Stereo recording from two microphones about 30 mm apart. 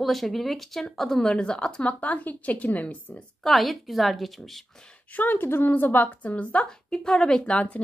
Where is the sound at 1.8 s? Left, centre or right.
Left.